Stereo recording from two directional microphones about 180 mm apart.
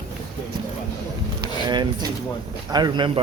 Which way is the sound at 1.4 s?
25° right (ahead or behind).